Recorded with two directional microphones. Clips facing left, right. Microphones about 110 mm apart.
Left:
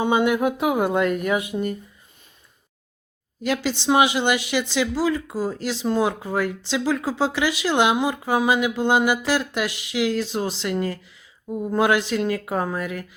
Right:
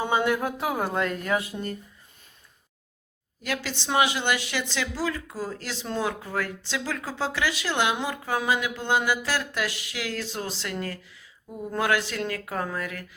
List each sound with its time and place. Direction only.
0.0 s speech: 15° left (ahead or behind)
3.4 s speech: 20° left (ahead or behind)